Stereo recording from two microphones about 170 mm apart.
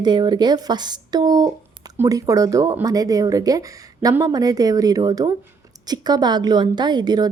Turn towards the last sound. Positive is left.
turn(degrees=-25)  # may be behind; listen again after turning